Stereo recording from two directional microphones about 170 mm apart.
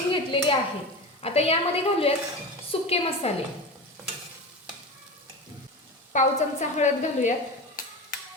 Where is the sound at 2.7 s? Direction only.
35° left (ahead or behind).